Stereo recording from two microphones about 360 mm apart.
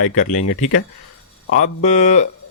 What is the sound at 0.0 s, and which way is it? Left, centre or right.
Speech, left.